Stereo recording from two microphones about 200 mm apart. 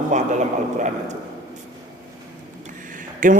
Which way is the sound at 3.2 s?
40° right (ahead or behind).